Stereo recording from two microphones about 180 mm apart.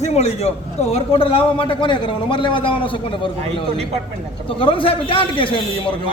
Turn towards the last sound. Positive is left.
turn(degrees=30)  # may be behind; listen again after turning